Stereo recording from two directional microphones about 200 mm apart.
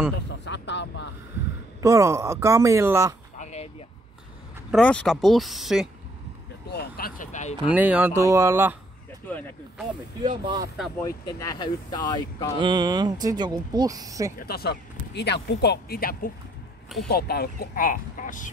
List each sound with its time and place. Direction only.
0.3 s a sound: 60° left (ahead or behind)
1.8 s speech: 15° right (ahead or behind)
3.3 s chop: 35° left (ahead or behind)
4.6 s speech: 5° left (ahead or behind)
6.7 s speech: 50° left (ahead or behind)
7.7 s speech: 10° right (ahead or behind)
10.2 s speech: 20° right (ahead or behind)
11.1 s speech: 15° left (ahead or behind)
12.5 s speech: 25° right (ahead or behind)
14.4 s speech: 50° left (ahead or behind)